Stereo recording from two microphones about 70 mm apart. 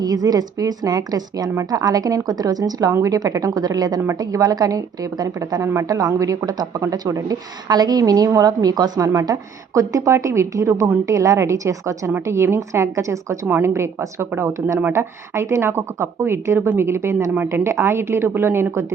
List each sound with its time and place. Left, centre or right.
0.0 s a woman's voice: right
2.9 s a woman's voice: right
5.6 s a woman's voice: right
7.7 s a woman's voice: right